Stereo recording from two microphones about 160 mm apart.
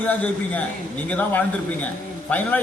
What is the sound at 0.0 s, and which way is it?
A man's voice, 10° left (ahead or behind).